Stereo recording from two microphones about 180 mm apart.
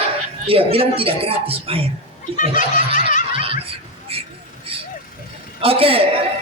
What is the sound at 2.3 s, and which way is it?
Speech, 45° left (ahead or behind).